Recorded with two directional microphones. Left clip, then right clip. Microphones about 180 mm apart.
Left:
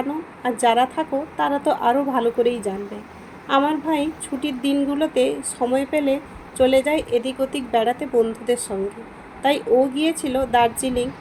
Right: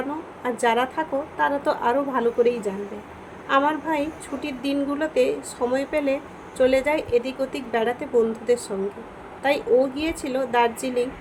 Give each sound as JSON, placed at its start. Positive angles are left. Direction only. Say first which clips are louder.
{"t": 0.6, "sound": "a woman's voice", "louder": "left 4 dB", "side_deg": 20}